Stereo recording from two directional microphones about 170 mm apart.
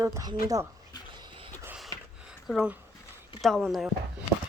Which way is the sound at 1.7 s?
Centre (ahead or behind).